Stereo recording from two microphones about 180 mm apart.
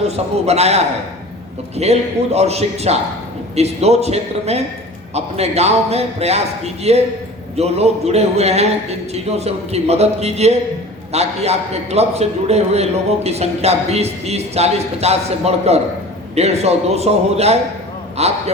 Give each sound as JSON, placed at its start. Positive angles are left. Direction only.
{"t": 0.0, "sound": "a man's voice", "side_deg": -35}